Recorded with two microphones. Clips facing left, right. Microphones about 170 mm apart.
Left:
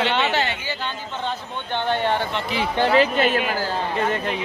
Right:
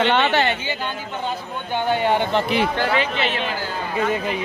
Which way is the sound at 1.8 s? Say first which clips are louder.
Right 3 dB; 10° right (ahead or behind).